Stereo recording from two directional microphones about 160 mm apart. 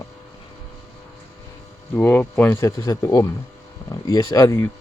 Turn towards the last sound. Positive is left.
turn(degrees=15)  # may be behind; listen again after turning